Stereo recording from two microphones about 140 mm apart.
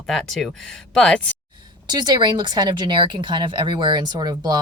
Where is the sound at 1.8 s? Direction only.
30° right (ahead or behind).